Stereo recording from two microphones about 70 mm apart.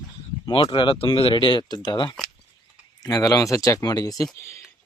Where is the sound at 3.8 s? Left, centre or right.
Left.